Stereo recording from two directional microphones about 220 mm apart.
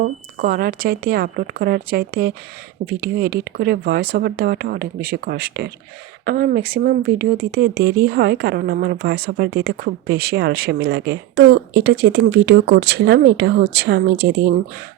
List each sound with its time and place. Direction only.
0.3 s speech: 40° right (ahead or behind)